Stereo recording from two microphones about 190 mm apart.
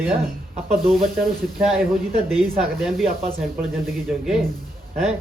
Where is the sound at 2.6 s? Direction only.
Centre (ahead or behind).